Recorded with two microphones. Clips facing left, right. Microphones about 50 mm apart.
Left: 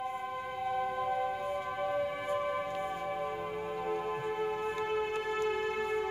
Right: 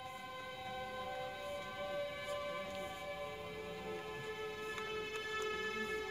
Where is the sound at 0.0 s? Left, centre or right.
Left.